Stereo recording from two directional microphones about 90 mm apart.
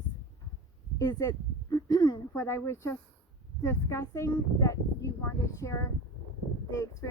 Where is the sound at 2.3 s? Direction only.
30° left (ahead or behind).